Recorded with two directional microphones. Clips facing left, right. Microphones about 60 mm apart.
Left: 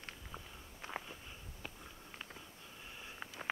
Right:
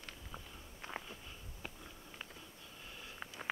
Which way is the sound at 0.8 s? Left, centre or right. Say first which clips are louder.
Left 1 dB; centre.